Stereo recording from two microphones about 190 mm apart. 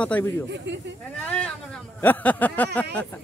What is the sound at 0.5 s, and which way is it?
Speech, 65° right (ahead or behind).